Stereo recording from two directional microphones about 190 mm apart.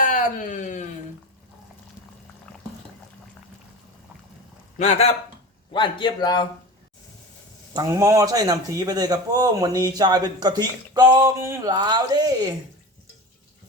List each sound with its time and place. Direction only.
0.0 s a sound: 45° left (ahead or behind)
4.8 s a man's voice: 35° left (ahead or behind)
5.7 s a man's voice: 25° left (ahead or behind)
7.7 s speech: 15° right (ahead or behind)